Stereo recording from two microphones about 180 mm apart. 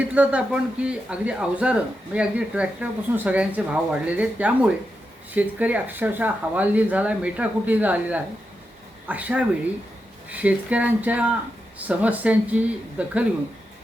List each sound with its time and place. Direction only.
0.1 s speech: 5° right (ahead or behind)